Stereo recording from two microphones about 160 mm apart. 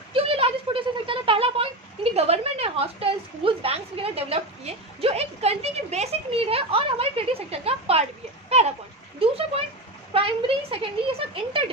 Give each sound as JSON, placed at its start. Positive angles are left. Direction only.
{"t": 0.1, "sound": "a sound", "side_deg": -35}
{"t": 2.1, "sound": "a woman's voice", "side_deg": -40}
{"t": 10.1, "sound": "speech", "side_deg": -35}